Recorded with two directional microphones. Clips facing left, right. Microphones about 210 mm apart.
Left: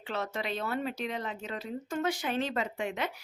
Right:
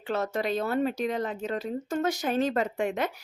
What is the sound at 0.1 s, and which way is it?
Speech, 45° right (ahead or behind).